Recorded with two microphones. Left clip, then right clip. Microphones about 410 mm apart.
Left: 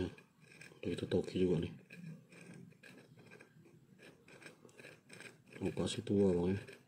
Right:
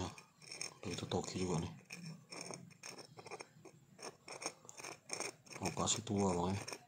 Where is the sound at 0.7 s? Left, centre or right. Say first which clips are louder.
Left 5 dB; centre.